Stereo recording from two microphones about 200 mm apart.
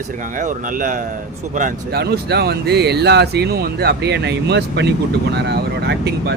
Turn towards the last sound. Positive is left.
turn(degrees=-55)  # may be behind; listen again after turning